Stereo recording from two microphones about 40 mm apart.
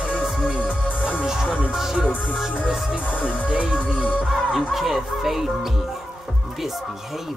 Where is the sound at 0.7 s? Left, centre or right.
Left.